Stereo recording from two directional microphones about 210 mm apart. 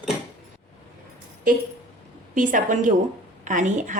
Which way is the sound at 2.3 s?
40° right (ahead or behind).